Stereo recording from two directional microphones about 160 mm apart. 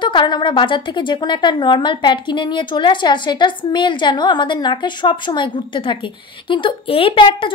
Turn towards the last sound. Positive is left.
turn(degrees=30)  # may be behind; listen again after turning